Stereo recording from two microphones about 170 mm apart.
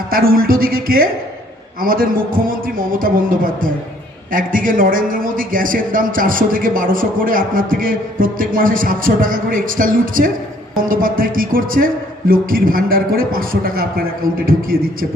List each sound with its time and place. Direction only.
0.1 s a man's voice: 60° right (ahead or behind)